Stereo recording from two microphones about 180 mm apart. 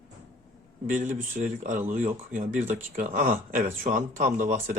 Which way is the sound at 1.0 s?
40° right (ahead or behind).